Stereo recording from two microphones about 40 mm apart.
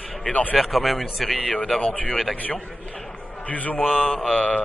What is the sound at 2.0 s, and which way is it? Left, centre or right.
Speech, left.